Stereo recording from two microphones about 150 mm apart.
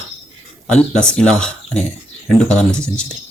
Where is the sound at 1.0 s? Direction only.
5° left (ahead or behind).